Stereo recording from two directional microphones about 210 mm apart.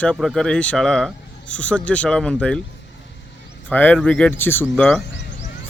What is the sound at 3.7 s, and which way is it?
Speech, 10° left (ahead or behind).